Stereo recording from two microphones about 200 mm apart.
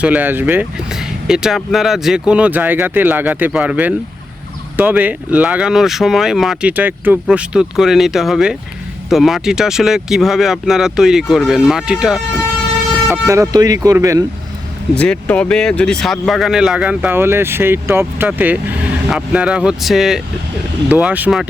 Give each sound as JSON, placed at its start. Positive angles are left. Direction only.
{"t": 0.0, "sound": "speech", "side_deg": -10}
{"t": 14.9, "sound": "speech", "side_deg": 5}